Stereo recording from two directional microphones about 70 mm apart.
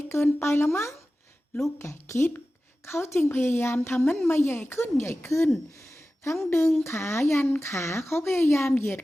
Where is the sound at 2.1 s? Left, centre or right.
Left.